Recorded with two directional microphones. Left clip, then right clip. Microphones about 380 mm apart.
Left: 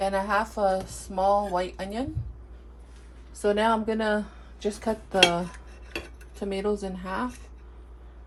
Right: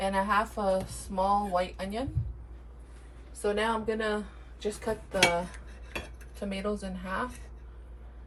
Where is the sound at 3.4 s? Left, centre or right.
Left.